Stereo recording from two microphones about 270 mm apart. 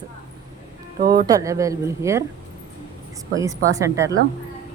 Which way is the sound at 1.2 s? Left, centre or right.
Centre.